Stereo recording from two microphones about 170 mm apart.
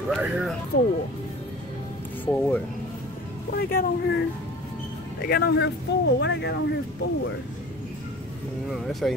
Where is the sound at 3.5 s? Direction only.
60° left (ahead or behind).